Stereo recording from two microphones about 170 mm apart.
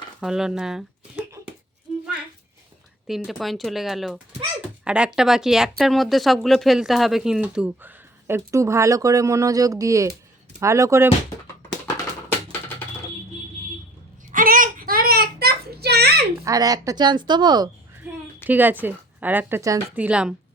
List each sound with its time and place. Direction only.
0.2 s speech: 5° right (ahead or behind)
3.1 s speech: centre (ahead or behind); by 11.1 s 15° right (ahead or behind)
14.3 s child singing: 50° right (ahead or behind); by 16.2 s 70° right (ahead or behind)
16.4 s speech: 20° right (ahead or behind)
18.4 s speech: 10° right (ahead or behind)